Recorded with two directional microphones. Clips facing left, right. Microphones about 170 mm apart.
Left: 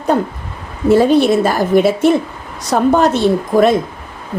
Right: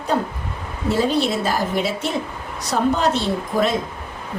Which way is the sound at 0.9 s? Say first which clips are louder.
Left 9 dB; 55° left (ahead or behind).